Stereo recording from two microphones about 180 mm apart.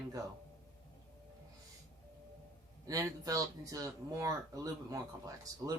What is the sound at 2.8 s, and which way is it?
Speech, 20° right (ahead or behind).